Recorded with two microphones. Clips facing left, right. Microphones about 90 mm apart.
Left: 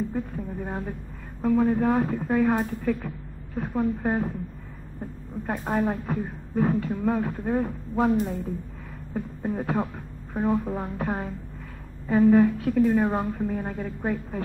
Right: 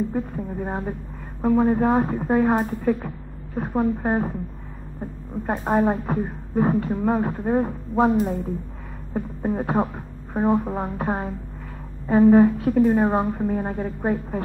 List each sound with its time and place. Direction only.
0.1 s speech: 30° right (ahead or behind)
5.5 s speech: 35° right (ahead or behind)